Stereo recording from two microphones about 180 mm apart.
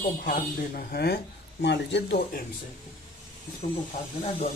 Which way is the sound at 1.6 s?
75° left (ahead or behind).